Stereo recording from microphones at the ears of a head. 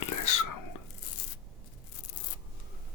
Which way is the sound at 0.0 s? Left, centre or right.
Left.